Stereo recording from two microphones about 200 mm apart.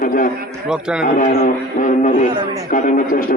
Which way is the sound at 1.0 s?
45° left (ahead or behind).